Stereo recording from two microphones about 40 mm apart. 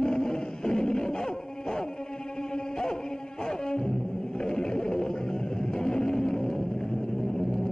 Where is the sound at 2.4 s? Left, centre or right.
Centre.